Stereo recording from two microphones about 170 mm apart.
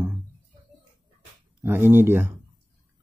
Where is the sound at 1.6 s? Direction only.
10° right (ahead or behind).